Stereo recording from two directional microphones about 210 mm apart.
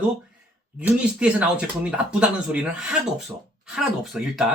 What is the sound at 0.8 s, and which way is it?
Speech, 5° right (ahead or behind).